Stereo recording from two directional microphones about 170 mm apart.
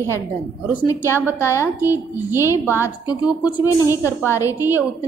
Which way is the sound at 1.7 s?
15° right (ahead or behind).